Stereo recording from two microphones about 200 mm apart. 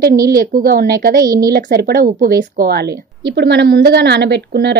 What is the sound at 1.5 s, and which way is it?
A woman's voice, 50° right (ahead or behind).